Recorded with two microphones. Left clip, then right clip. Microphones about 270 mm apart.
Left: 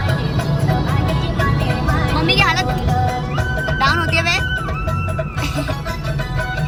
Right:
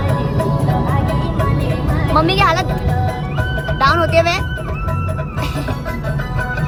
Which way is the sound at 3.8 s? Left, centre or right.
Centre.